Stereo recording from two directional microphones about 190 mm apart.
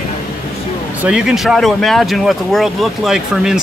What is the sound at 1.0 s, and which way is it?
Speech, 5° right (ahead or behind).